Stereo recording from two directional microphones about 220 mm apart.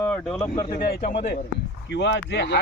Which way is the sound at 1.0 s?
30° left (ahead or behind).